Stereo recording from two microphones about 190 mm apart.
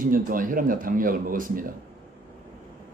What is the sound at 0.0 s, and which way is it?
Speech, 45° right (ahead or behind).